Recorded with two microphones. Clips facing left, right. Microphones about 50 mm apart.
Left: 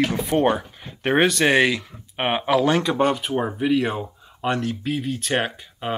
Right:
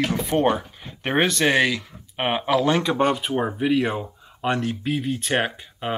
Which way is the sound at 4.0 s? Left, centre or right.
Centre.